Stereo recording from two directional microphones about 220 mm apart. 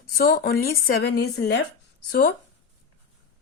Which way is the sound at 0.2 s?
45° left (ahead or behind).